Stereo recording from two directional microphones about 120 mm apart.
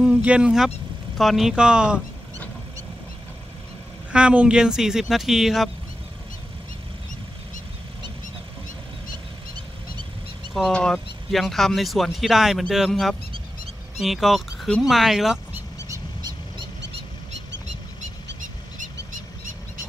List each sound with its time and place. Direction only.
0.0 s speech: 10° right (ahead or behind)
4.1 s speech: 10° right (ahead or behind)
10.5 s speech: 5° left (ahead or behind)
15.9 s vehicle: 35° right (ahead or behind)